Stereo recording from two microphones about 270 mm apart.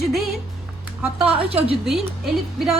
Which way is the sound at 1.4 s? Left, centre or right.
Right.